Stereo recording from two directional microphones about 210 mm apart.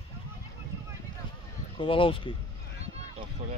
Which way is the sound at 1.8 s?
25° left (ahead or behind).